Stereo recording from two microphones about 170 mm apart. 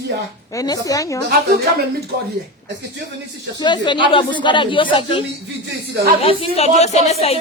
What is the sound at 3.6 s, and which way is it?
A woman's voice, 25° left (ahead or behind).